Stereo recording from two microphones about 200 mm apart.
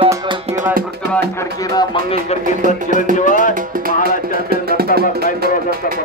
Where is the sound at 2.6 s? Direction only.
40° right (ahead or behind).